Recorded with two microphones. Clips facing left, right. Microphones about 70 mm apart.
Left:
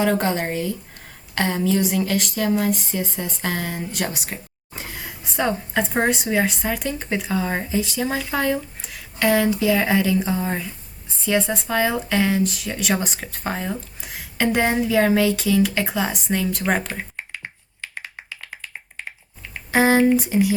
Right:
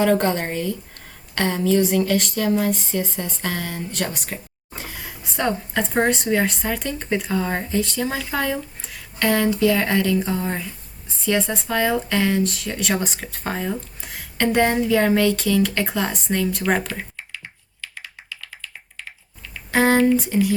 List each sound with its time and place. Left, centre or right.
0.0 s speech: centre
17.2 s computer keyboard: left
19.7 s a sound: centre
20.1 s speech: centre